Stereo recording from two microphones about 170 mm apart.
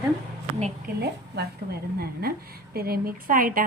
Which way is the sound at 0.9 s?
70° right (ahead or behind).